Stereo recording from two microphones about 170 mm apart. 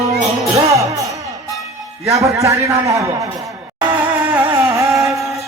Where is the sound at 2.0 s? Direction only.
20° right (ahead or behind).